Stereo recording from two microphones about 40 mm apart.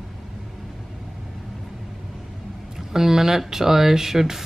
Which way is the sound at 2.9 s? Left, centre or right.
Centre.